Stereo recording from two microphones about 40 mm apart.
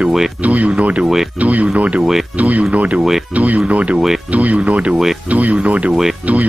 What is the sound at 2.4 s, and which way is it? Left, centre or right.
Speech, right.